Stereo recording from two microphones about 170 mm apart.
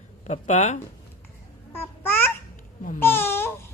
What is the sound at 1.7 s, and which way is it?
Babbling, 15° left (ahead or behind).